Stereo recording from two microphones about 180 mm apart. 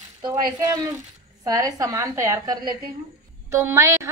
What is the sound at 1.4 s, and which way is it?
A woman's voice, 20° right (ahead or behind).